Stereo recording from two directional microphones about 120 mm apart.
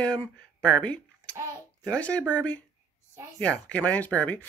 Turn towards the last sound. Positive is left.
turn(degrees=10)  # may be behind; listen again after turning